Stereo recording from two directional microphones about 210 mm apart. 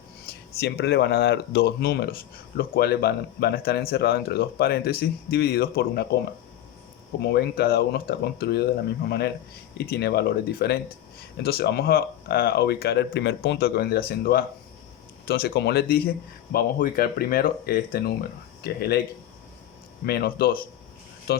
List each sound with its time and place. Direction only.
0.6 s speech: 50° left (ahead or behind)
7.2 s speech: 50° left (ahead or behind)
20.1 s speech: 45° left (ahead or behind)